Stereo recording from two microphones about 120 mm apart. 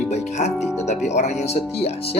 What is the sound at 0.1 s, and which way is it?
Speech, 70° left (ahead or behind).